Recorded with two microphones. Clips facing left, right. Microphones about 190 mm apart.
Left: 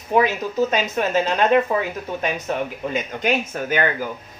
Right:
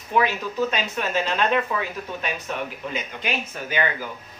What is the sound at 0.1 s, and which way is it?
Speech, 40° left (ahead or behind).